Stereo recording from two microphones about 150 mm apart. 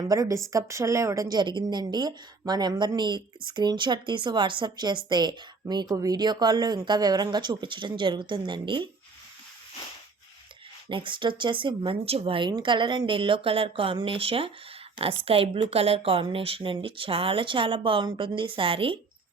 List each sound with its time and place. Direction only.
0.0 s a woman's voice: 25° right (ahead or behind)
10.8 s speech: 35° right (ahead or behind)